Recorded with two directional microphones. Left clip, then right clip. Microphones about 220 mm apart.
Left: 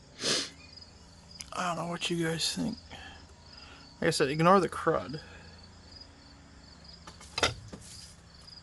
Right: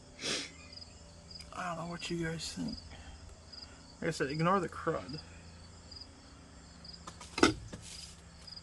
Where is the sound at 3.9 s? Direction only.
45° left (ahead or behind).